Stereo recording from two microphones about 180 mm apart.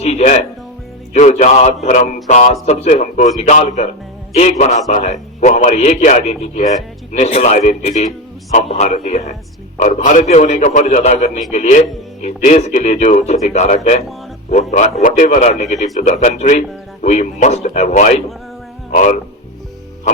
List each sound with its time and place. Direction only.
0.0 s music: 40° left (ahead or behind)
1.1 s a man's voice: 40° left (ahead or behind)